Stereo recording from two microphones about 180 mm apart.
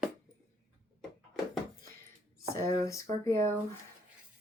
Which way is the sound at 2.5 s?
20° left (ahead or behind).